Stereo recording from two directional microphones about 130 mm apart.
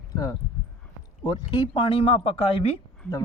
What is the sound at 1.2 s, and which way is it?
Speech, 35° left (ahead or behind).